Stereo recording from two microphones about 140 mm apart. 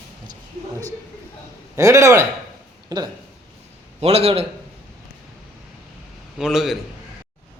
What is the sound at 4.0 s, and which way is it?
Speech, 45° right (ahead or behind).